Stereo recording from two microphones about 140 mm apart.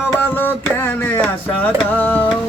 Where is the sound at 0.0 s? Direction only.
15° left (ahead or behind).